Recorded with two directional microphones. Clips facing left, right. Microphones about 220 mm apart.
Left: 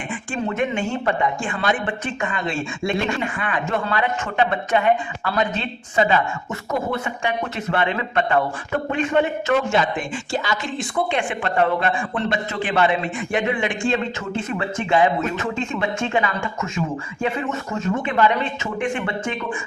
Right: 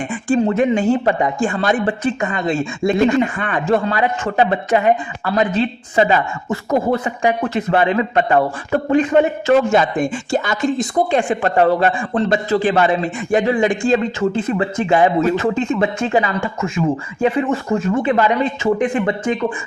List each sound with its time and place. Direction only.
0.3 s speech: 35° right (ahead or behind)